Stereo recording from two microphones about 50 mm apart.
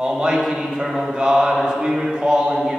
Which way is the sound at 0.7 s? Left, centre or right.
Centre.